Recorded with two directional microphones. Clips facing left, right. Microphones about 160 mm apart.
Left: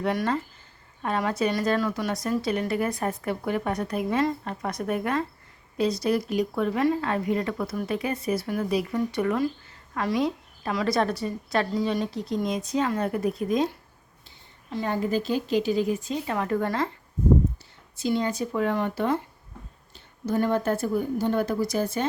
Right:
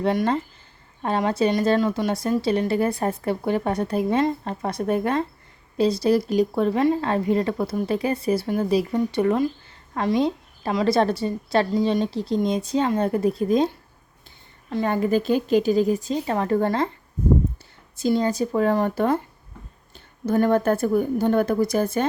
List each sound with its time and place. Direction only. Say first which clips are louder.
0.0 s a woman's voice: right 4 dB; 25° right (ahead or behind)
14.7 s a woman's voice: right 5 dB; 55° right (ahead or behind); by 16.9 s 30° right (ahead or behind)
17.9 s a woman's voice: right 4 dB; 40° right (ahead or behind)